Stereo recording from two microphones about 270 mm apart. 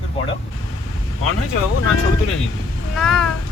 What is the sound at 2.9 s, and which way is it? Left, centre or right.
Cat, centre.